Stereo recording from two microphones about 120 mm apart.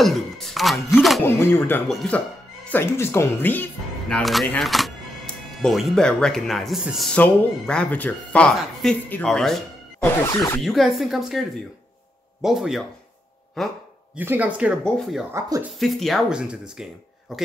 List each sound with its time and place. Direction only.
0.0 s speech: centre (ahead or behind)
1.2 s speech: 20° left (ahead or behind)
1.9 s speech: centre (ahead or behind)
2.7 s speech: 20° left (ahead or behind)
4.1 s speech: centre (ahead or behind)
7.1 s speech: 10° left (ahead or behind)
10.0 s speech: 20° left (ahead or behind)
10.6 s speech: centre (ahead or behind)
14.1 s speech: 15° right (ahead or behind)
14.9 s speech: centre (ahead or behind)